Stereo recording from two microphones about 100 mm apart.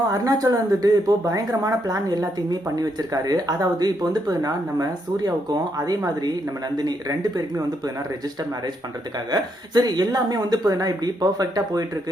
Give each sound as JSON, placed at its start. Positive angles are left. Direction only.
{"t": 0.1, "sound": "speech", "side_deg": -35}
{"t": 9.3, "sound": "speech", "side_deg": -40}